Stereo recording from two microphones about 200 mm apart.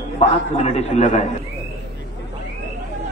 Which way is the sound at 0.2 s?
35° left (ahead or behind).